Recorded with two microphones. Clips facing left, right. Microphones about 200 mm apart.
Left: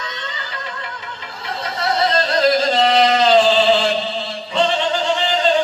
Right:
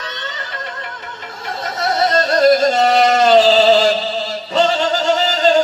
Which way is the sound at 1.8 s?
45° right (ahead or behind).